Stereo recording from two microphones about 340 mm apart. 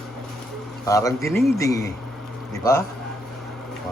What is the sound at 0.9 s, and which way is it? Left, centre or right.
A man's voice, centre.